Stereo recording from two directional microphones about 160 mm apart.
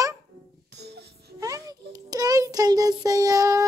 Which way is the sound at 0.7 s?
90° right.